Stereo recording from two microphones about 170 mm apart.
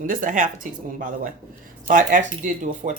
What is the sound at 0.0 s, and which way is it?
Speech, 50° right (ahead or behind).